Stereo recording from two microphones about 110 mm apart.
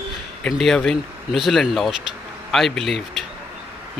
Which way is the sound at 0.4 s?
5° left (ahead or behind).